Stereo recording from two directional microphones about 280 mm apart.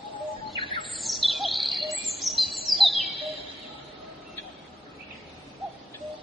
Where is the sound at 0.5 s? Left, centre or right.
Centre.